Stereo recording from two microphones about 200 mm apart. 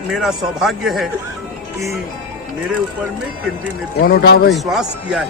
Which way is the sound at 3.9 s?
50° left (ahead or behind).